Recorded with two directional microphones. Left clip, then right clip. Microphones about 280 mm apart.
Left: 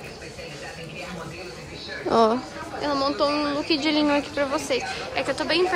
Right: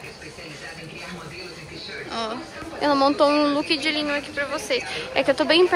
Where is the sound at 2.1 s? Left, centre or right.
Centre.